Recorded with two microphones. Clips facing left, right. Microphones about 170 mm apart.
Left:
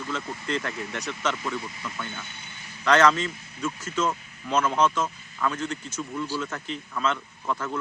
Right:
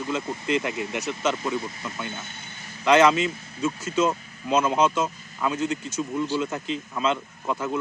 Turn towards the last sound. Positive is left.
turn(degrees=-15)  # may be behind; listen again after turning